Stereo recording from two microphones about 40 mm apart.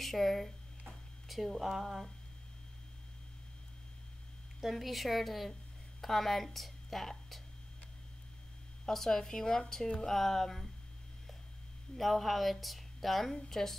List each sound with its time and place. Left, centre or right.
0.0 s speech: centre
0.8 s a sound: centre
4.6 s a woman's voice: centre
5.5 s a sound: centre
8.8 s a woman's voice: centre
12.0 s a woman's voice: centre